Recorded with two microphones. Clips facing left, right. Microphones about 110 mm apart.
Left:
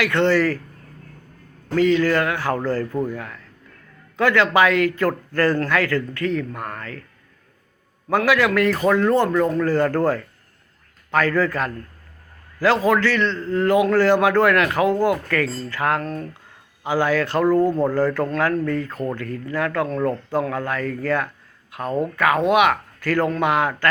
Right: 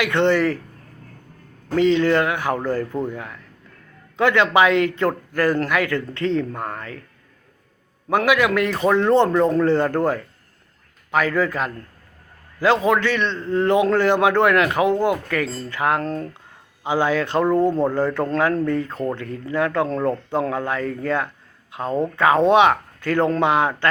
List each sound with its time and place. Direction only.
0.0 s a man's voice: 20° right (ahead or behind)
1.7 s a man's voice: 20° right (ahead or behind)
8.1 s a man's voice: 20° right (ahead or behind)